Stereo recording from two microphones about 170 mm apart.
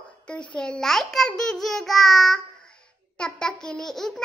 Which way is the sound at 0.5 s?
5° left (ahead or behind).